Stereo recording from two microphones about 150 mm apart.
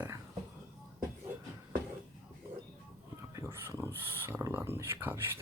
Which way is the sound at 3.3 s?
15° right (ahead or behind).